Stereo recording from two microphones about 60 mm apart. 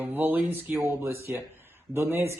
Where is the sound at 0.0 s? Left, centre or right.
Right.